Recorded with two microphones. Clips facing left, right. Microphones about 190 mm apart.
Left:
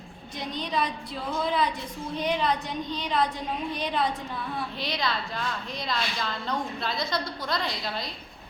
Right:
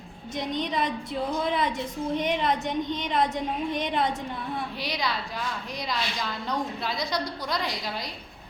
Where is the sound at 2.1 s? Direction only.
20° right (ahead or behind).